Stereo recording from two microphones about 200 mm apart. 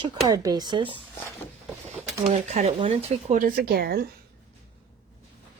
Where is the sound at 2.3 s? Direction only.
35° right (ahead or behind).